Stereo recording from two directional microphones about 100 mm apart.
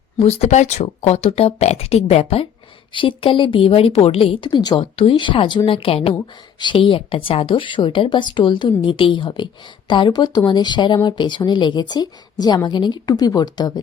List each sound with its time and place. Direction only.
0.2 s speech: 85° left
2.9 s a woman's voice: 60° left (ahead or behind)
4.8 s a woman's voice: 65° left (ahead or behind)
6.1 s a woman's voice: 50° left (ahead or behind)